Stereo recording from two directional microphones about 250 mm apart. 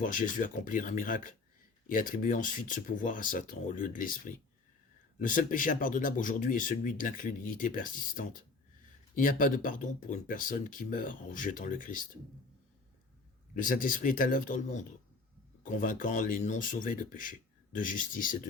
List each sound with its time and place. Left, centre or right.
0.0 s speech: left
13.6 s speech: left